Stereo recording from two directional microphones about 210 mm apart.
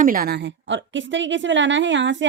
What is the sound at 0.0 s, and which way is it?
A woman's voice, 45° right (ahead or behind).